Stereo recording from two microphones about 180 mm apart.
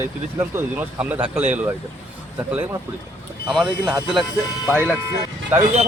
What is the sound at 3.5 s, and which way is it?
Speech, 5° right (ahead or behind).